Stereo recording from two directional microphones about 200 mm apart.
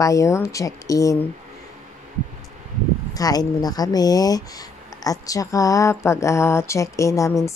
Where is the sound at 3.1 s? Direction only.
20° left (ahead or behind).